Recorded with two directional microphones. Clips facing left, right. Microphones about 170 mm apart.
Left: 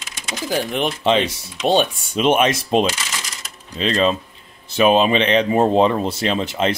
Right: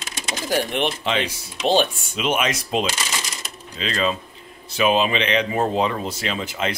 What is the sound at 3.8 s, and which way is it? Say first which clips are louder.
Speech: left 5 dB; 25° left (ahead or behind).